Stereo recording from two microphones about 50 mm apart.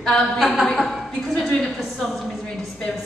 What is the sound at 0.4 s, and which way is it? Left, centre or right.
Speech, centre.